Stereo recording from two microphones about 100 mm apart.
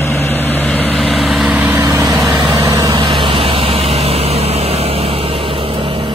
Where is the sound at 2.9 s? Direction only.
65° right (ahead or behind).